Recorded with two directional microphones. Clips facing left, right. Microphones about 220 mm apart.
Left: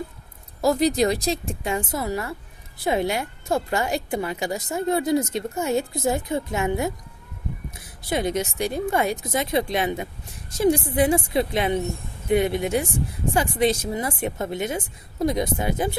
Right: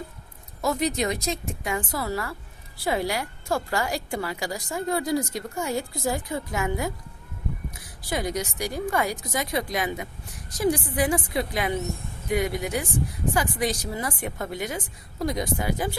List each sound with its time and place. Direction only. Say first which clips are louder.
0.6 s a woman's voice: left 6 dB; 35° left (ahead or behind)